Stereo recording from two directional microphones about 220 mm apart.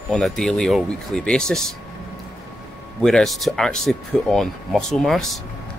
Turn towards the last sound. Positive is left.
turn(degrees=0)  # may be behind; listen again after turning